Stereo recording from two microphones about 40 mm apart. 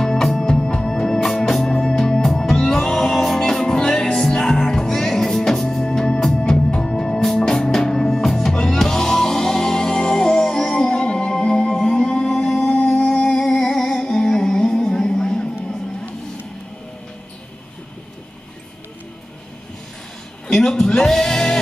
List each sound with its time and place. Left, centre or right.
0.0 s music: centre
8.2 s music: centre
12.5 s music: left
20.4 s music: centre